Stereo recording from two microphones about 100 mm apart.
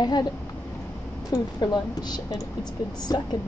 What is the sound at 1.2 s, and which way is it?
A woman's voice, 40° left (ahead or behind).